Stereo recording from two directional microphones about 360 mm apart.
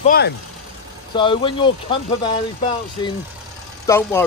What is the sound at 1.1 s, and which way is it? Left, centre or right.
Speech, centre.